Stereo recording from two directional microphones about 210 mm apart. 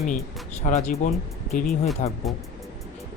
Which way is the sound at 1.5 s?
Centre (ahead or behind).